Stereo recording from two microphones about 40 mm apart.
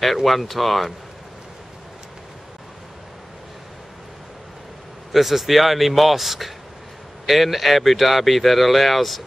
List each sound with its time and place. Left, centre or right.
0.0 s speech: centre
5.1 s speech: centre